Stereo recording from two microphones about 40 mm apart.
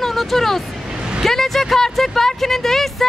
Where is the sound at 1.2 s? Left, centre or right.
Centre.